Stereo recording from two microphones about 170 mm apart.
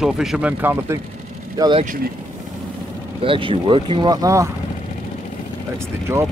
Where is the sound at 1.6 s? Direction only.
30° right (ahead or behind).